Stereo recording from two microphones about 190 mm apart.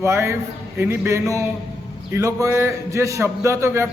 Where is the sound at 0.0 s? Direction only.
15° right (ahead or behind).